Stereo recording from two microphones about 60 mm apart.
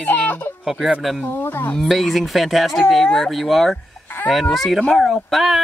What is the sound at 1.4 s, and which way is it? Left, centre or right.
Speech, left.